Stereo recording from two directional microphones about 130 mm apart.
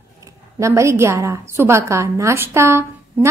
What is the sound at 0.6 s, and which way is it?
A woman's voice, 25° right (ahead or behind).